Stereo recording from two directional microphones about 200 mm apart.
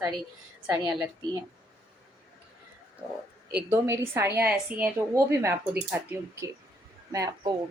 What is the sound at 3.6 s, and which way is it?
A woman's voice, 10° right (ahead or behind).